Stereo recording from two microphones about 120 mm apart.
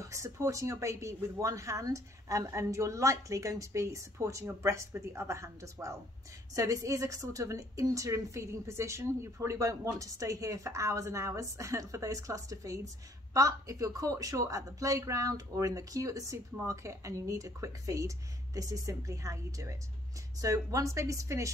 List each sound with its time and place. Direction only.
0.0 s a woman's voice: 25° right (ahead or behind)